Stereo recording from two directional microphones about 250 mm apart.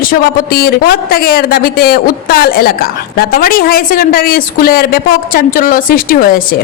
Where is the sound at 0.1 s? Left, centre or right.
Left.